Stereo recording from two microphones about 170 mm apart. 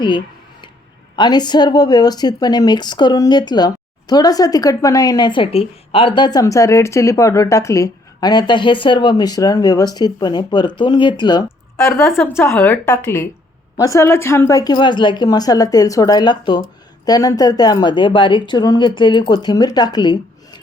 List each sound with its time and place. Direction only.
1.1 s speech: 25° left (ahead or behind)
12.4 s a woman's voice: 10° left (ahead or behind)